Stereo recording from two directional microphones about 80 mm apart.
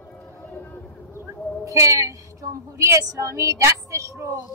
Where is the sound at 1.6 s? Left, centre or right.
Right.